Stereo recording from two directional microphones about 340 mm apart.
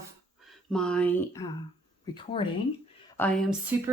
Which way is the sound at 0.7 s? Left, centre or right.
Centre.